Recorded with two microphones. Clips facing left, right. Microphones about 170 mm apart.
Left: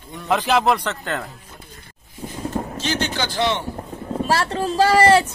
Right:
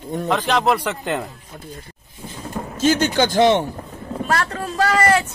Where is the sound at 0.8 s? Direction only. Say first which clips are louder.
Right 3 dB; 15° right (ahead or behind).